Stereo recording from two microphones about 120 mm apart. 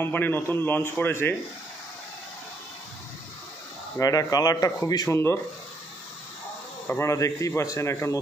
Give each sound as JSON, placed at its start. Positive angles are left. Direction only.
{"t": 0.0, "sound": "a man's voice", "side_deg": 15}
{"t": 4.0, "sound": "speech", "side_deg": 30}
{"t": 6.9, "sound": "speech", "side_deg": 25}